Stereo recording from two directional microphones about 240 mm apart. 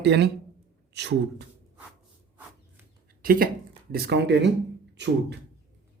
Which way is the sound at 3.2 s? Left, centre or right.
Right.